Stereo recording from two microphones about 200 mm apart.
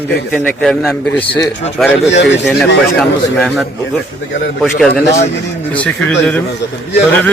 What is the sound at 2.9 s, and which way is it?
Speech, centre (ahead or behind).